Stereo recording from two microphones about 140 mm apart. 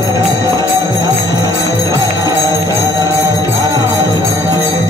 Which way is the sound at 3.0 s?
20° right (ahead or behind).